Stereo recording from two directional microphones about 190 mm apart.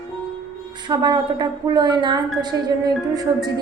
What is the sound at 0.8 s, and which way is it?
A woman's voice, 20° right (ahead or behind).